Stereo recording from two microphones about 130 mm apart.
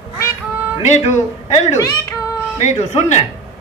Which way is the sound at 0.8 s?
60° left (ahead or behind).